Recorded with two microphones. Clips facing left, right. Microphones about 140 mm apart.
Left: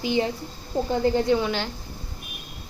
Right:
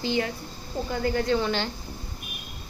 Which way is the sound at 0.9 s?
25° left (ahead or behind).